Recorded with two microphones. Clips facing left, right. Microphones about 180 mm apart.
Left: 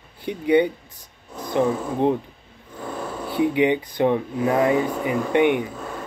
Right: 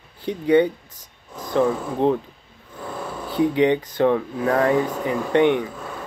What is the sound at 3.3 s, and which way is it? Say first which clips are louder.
Speech: right 1 dB; 15° left (ahead or behind).